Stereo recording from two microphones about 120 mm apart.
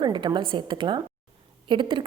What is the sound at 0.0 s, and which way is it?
A woman's voice, 40° right (ahead or behind).